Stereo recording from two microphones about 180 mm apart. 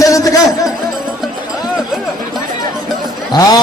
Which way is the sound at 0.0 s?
20° left (ahead or behind).